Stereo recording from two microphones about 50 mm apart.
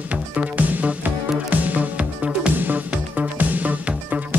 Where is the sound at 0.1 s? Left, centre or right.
Right.